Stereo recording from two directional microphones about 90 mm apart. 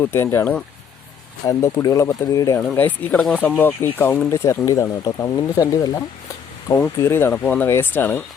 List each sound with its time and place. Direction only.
0.0 s speech: 25° left (ahead or behind)
1.5 s speech: 35° left (ahead or behind)
2.6 s speech: 15° left (ahead or behind); by 6.0 s 40° left (ahead or behind)
6.7 s speech: 25° left (ahead or behind)